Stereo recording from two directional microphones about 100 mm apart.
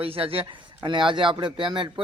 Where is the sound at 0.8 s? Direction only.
55° right (ahead or behind).